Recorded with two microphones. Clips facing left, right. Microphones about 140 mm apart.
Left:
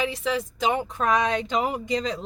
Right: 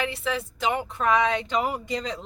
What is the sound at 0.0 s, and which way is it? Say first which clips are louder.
Speech: left 2 dB; 15° left (ahead or behind).